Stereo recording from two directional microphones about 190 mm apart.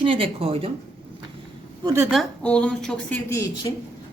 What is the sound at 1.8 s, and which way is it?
Speech, 15° right (ahead or behind).